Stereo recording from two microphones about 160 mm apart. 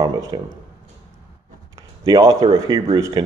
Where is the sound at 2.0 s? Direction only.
20° right (ahead or behind).